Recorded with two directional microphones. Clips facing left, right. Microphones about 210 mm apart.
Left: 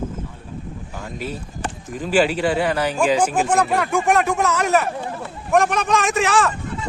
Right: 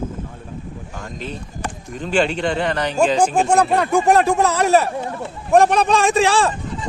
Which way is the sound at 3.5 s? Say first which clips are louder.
Right 3 dB; 30° right (ahead or behind).